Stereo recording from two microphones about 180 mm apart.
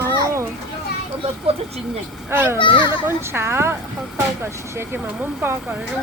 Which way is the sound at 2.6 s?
25° left (ahead or behind).